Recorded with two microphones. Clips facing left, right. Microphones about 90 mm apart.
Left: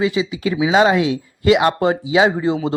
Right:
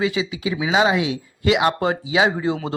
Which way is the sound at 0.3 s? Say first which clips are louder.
Left 5 dB; 45° left (ahead or behind).